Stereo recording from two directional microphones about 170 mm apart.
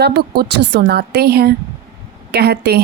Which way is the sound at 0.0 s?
70° right (ahead or behind).